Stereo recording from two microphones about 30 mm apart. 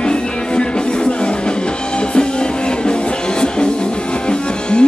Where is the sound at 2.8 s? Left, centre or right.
Left.